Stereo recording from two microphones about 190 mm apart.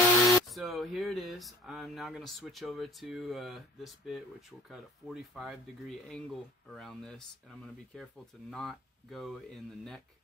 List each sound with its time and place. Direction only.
0.5 s speech: centre (ahead or behind)